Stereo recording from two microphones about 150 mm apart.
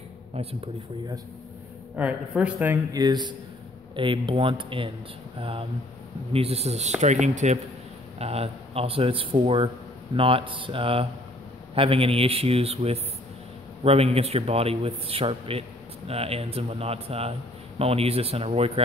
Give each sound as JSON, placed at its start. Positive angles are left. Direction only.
{"t": 2.0, "sound": "a woman's voice", "side_deg": -10}
{"t": 2.9, "sound": "a man's voice", "side_deg": -30}